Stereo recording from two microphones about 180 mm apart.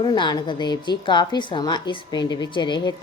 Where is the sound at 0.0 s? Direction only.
25° left (ahead or behind).